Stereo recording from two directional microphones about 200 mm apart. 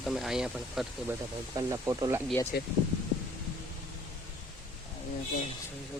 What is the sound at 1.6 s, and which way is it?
Speech, 15° right (ahead or behind).